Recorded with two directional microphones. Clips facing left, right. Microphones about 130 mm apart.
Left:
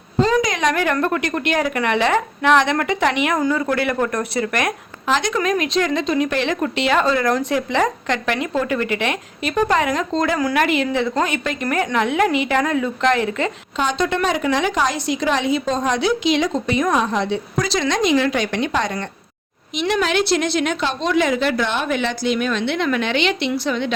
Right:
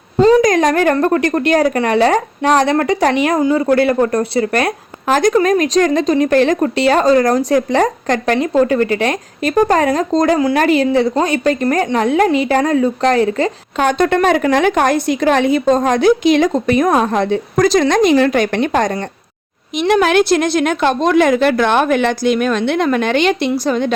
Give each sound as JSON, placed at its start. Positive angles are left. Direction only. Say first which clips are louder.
{"t": 0.2, "sound": "a sound", "louder": "right 7 dB", "side_deg": -35}
{"t": 0.4, "sound": "speech", "louder": "right 7 dB", "side_deg": -45}
{"t": 5.0, "sound": "speech", "louder": "right 7 dB", "side_deg": -45}
{"t": 13.7, "sound": "a woman's voice", "louder": "right 7 dB", "side_deg": -55}